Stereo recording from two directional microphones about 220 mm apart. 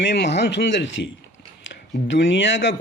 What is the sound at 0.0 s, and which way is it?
A man's voice, 50° left (ahead or behind).